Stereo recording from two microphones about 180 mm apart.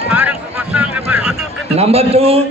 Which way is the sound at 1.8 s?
35° right (ahead or behind).